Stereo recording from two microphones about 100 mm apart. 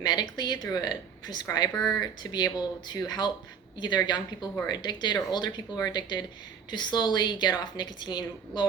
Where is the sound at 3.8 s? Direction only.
45° left (ahead or behind).